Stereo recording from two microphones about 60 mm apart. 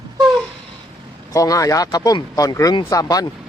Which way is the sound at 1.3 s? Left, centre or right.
Left.